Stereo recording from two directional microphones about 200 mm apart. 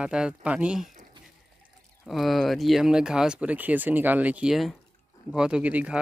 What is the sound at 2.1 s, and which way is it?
Speech, centre (ahead or behind).